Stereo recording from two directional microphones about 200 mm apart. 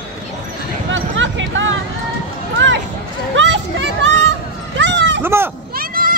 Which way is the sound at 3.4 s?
65° right (ahead or behind).